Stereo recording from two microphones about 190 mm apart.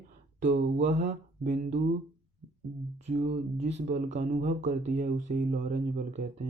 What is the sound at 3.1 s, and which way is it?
Speech, 35° right (ahead or behind).